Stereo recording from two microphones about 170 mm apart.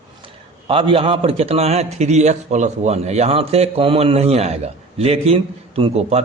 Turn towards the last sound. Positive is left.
turn(degrees=-40)  # may be behind; listen again after turning